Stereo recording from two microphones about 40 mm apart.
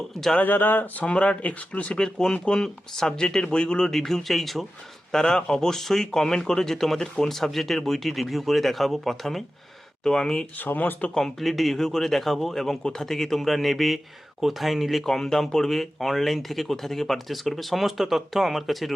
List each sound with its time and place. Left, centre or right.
0.3 s speech: left
1.0 s speech: left
1.4 s speech: left
2.0 s speech: centre
3.9 s speech: centre
5.2 s speech: centre
7.3 s speech: centre
10.6 s speech: left
11.2 s speech: centre
15.0 s speech: centre